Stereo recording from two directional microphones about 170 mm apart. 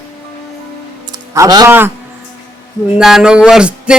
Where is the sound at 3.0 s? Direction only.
5° right (ahead or behind).